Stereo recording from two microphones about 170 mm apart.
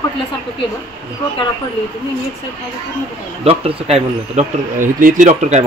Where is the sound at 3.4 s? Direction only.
35° right (ahead or behind).